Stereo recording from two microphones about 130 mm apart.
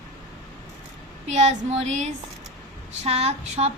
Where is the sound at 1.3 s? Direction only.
60° right (ahead or behind).